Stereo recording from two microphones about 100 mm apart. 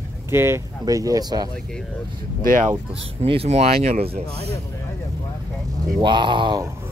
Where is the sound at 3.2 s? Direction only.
80° right.